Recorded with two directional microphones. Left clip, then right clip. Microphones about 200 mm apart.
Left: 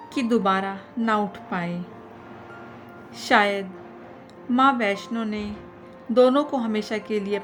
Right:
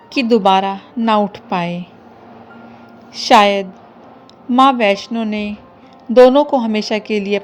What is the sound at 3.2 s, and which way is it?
A woman's voice, 25° right (ahead or behind).